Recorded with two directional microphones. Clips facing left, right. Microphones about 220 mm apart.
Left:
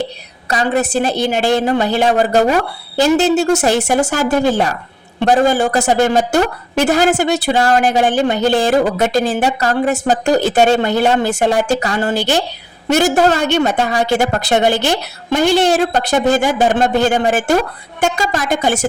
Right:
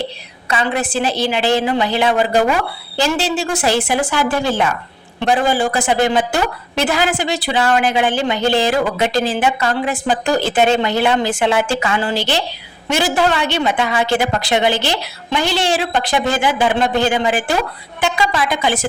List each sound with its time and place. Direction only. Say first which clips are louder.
0.5 s a woman's voice: left 3 dB; 40° left (ahead or behind)